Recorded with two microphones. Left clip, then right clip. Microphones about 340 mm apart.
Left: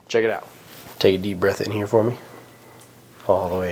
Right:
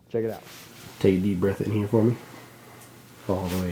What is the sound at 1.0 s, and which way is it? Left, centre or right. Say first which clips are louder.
Speech: left 5 dB; left.